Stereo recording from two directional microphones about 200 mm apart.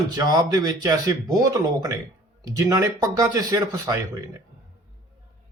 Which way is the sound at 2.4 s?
20° right (ahead or behind).